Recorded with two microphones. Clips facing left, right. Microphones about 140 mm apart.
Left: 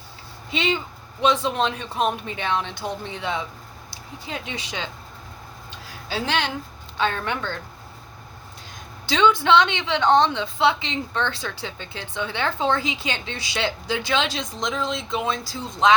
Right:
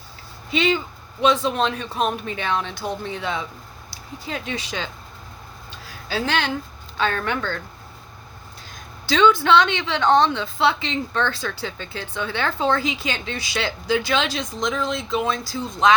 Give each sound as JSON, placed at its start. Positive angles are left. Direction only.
{"t": 0.5, "sound": "a woman's voice", "side_deg": 25}
{"t": 6.1, "sound": "a woman's voice", "side_deg": 20}
{"t": 9.0, "sound": "a woman's voice", "side_deg": 20}